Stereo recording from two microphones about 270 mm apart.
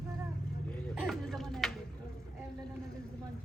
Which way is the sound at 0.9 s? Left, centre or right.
Centre.